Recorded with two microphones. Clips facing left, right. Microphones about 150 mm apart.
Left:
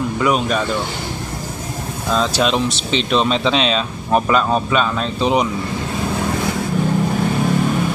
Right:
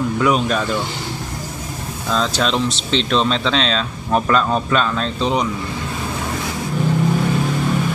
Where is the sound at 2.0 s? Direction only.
10° left (ahead or behind).